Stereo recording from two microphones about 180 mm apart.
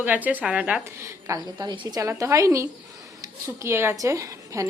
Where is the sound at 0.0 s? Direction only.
10° right (ahead or behind).